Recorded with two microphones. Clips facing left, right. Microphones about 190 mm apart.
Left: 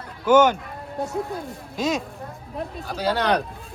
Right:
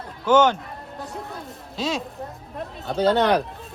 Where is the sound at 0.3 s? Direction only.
10° left (ahead or behind).